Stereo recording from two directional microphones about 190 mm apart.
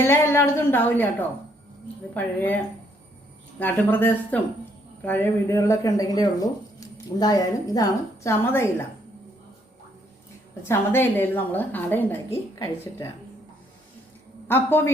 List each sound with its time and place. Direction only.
0.1 s speech: 15° left (ahead or behind)
3.6 s speech: 10° left (ahead or behind)
10.7 s speech: 10° left (ahead or behind)
14.4 s a man's voice: 10° left (ahead or behind)